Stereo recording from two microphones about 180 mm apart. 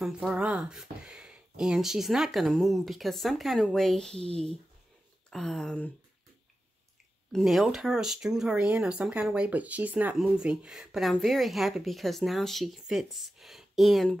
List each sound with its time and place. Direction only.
0.0 s speech: 5° right (ahead or behind)
4.3 s speech: 35° right (ahead or behind)
5.3 s speech: centre (ahead or behind)
7.3 s speech: centre (ahead or behind)